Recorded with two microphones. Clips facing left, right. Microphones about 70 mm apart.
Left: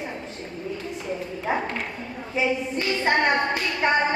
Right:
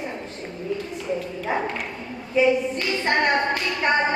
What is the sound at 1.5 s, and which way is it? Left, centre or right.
Speech, left.